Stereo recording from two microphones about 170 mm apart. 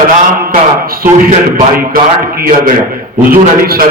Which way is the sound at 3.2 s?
60° right (ahead or behind).